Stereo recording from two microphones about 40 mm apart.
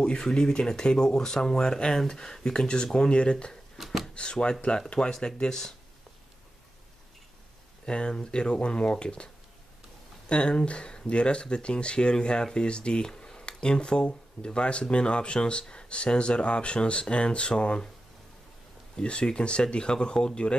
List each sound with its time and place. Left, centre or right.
0.0 s speech: left
3.7 s a sound: centre
4.1 s speech: left
7.8 s speech: left
18.9 s speech: left